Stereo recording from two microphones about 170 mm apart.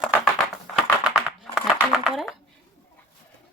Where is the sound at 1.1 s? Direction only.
5° right (ahead or behind).